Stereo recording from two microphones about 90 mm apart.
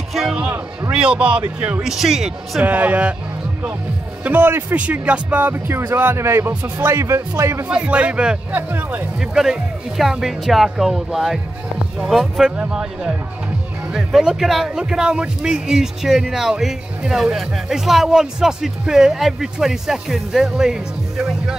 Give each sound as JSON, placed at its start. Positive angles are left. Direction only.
{"t": 0.9, "sound": "speech", "side_deg": -10}
{"t": 2.6, "sound": "speech", "side_deg": -20}
{"t": 4.2, "sound": "speech", "side_deg": -20}
{"t": 7.6, "sound": "speech", "side_deg": -15}
{"t": 8.5, "sound": "speech", "side_deg": -20}
{"t": 9.2, "sound": "speech", "side_deg": -5}